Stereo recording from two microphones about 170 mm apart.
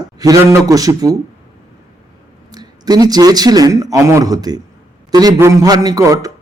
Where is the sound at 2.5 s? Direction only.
20° right (ahead or behind).